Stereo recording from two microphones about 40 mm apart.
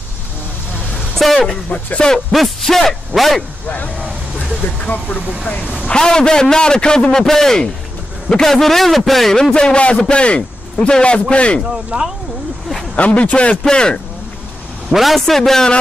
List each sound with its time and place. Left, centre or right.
1.1 s speech: centre
2.0 s a man's voice: centre
2.3 s a man's voice: centre
3.6 s speech: left
5.9 s a man's voice: centre
9.3 s a man's voice: centre
11.7 s speech: centre
12.9 s speech: left
13.7 s a man's voice: centre
14.9 s a man's voice: centre
15.2 s a man's voice: centre